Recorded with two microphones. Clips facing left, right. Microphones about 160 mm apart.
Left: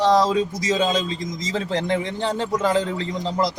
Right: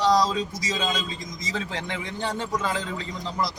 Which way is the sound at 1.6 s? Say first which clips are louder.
Left 10 dB; 35° left (ahead or behind).